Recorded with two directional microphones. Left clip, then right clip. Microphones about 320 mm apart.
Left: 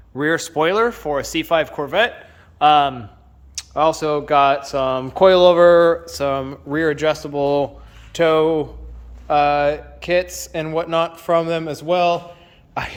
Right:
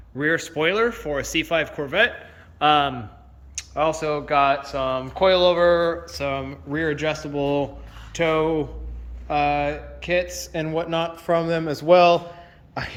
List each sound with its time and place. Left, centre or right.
0.2 s speech: centre
3.5 s a sound: centre
4.0 s speech: left
10.2 s speech: left
10.5 s speech: centre